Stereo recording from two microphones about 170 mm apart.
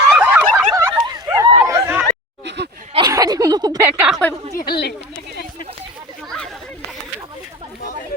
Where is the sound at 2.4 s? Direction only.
90° right.